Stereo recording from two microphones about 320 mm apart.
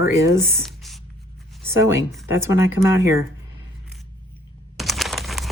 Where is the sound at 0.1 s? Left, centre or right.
Centre.